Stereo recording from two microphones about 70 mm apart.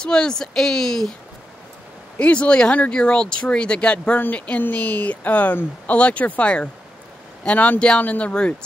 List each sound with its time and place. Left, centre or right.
0.0 s speech: centre
2.1 s speech: centre